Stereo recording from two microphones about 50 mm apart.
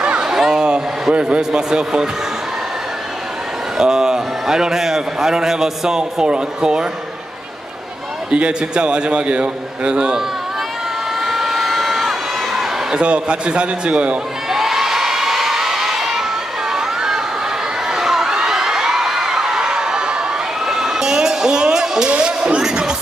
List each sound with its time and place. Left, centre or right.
0.0 s a sound: centre
3.7 s a man's voice: centre
8.3 s a man's voice: centre
11.2 s crowd: centre
12.9 s a man's voice: right
14.5 s crowd: centre
16.7 s a sound: centre
22.1 s music: right